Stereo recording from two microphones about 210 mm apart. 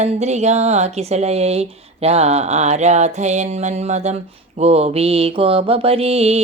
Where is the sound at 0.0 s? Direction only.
30° right (ahead or behind).